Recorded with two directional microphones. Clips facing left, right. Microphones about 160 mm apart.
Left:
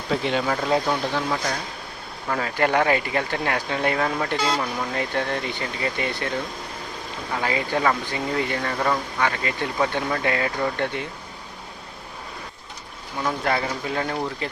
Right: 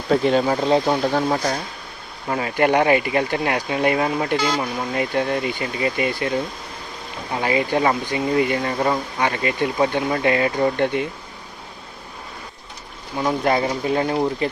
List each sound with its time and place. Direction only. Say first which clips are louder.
0.1 s speech: right 7 dB; 40° right (ahead or behind)
0.4 s speech: right 4 dB; 25° right (ahead or behind)
1.1 s speech: right 5 dB; 40° right (ahead or behind)
2.3 s speech: right 3 dB; 15° right (ahead or behind)
7.3 s speech: right 5 dB; 20° right (ahead or behind)
13.1 s speech: right 5 dB; 20° right (ahead or behind)